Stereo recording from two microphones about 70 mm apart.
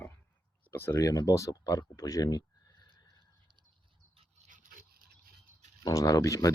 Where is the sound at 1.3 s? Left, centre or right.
Left.